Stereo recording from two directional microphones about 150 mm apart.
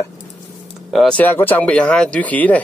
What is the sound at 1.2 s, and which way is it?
Speech, 15° left (ahead or behind).